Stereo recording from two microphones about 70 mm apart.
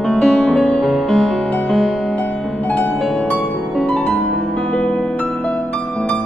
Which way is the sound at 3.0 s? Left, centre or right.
Centre.